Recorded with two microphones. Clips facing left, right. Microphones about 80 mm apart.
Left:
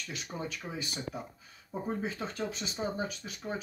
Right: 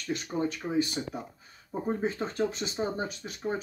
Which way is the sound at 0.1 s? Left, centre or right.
Right.